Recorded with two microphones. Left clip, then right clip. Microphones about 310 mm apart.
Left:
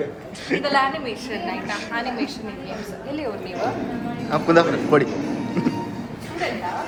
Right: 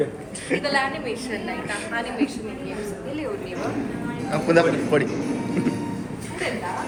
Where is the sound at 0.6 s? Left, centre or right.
Left.